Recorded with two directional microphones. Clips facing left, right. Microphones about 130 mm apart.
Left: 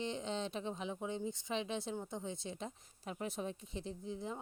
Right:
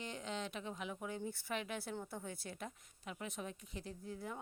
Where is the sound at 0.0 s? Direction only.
25° left (ahead or behind).